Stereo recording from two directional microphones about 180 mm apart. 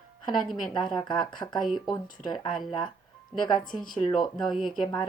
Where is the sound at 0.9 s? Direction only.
25° left (ahead or behind).